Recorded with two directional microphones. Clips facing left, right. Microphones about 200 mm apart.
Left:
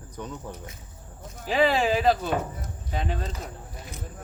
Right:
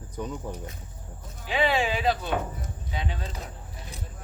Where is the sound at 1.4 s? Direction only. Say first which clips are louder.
Left 3 dB; 40° left (ahead or behind).